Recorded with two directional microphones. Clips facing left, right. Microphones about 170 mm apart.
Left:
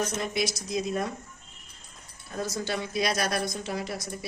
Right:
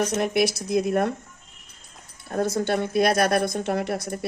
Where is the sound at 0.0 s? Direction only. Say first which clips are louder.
Right 7 dB; 70° right (ahead or behind).